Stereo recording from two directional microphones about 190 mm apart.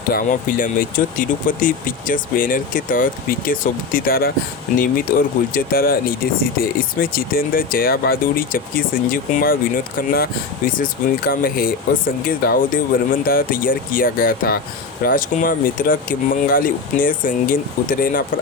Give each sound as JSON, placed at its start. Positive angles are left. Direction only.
{"t": 0.1, "sound": "speech", "side_deg": 50}